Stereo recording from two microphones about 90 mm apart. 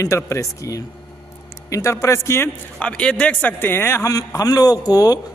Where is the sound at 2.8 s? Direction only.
15° left (ahead or behind).